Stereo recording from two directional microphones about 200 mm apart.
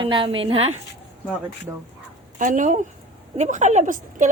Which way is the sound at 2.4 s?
40° right (ahead or behind).